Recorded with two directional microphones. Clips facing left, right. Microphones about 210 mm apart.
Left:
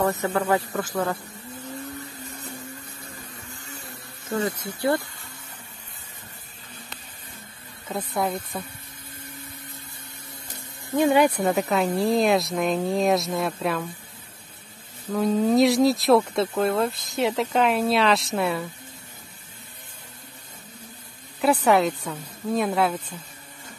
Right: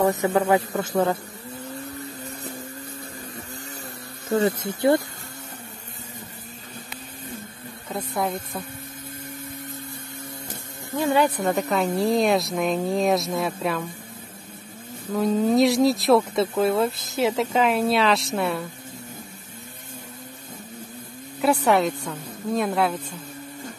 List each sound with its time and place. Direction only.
0.0 s a man's voice: 15° right (ahead or behind)
4.3 s speech: 35° right (ahead or behind)
4.6 s a man's voice: 25° right (ahead or behind)
7.9 s speech: centre (ahead or behind)
11.0 s speech: 15° left (ahead or behind)
11.4 s speech: centre (ahead or behind)
15.1 s speech: centre (ahead or behind)
21.4 s speech: centre (ahead or behind)